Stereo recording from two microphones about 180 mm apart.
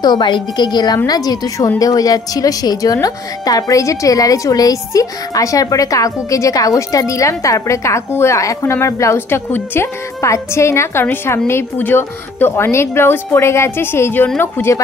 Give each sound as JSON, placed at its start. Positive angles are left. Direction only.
{"t": 0.0, "sound": "a woman's voice", "side_deg": 25}